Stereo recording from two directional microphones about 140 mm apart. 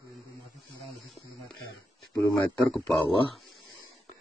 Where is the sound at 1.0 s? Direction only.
Centre (ahead or behind).